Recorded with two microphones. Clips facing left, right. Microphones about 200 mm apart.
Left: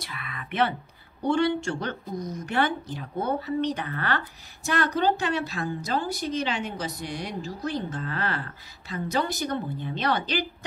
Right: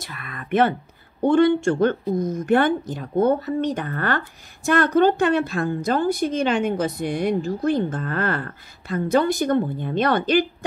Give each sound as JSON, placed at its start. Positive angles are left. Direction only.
{"t": 0.0, "sound": "a woman's voice", "side_deg": -45}